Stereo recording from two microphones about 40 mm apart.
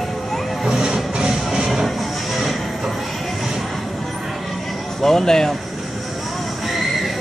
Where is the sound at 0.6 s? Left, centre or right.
Centre.